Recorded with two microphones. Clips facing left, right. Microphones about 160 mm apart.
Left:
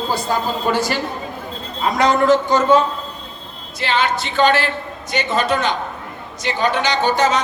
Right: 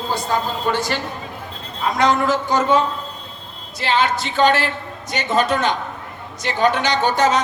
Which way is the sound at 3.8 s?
40° right (ahead or behind).